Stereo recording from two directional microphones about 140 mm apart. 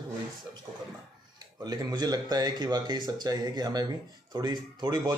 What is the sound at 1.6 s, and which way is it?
Speech, 30° right (ahead or behind).